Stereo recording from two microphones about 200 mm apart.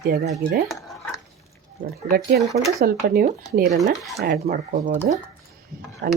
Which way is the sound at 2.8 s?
45° right (ahead or behind).